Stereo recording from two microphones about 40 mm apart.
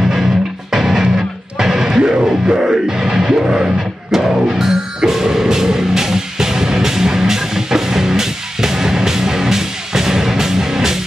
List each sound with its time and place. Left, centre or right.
0.0 s music: centre